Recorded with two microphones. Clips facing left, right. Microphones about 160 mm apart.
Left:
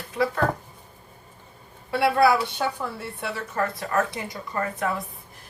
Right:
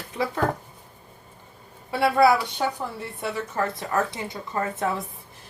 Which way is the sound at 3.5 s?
20° right (ahead or behind).